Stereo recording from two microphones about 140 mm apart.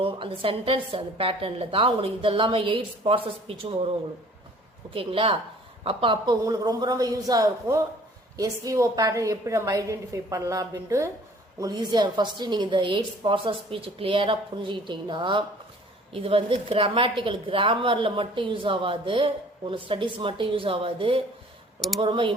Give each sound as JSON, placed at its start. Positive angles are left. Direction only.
{"t": 0.0, "sound": "a woman's voice", "side_deg": -40}
{"t": 4.9, "sound": "a woman's voice", "side_deg": -40}
{"t": 6.4, "sound": "a woman's voice", "side_deg": -25}
{"t": 21.8, "sound": "speech", "side_deg": 0}
{"t": 22.0, "sound": "a woman's voice", "side_deg": -40}